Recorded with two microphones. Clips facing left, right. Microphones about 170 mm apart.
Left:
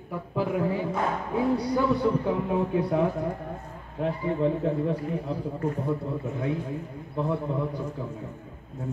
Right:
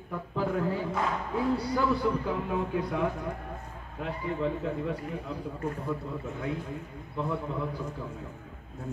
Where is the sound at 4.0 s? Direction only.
35° left (ahead or behind).